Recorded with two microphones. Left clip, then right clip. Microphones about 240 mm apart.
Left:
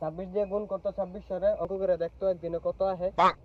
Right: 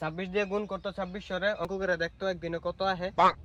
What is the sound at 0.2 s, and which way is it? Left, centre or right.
Speech, right.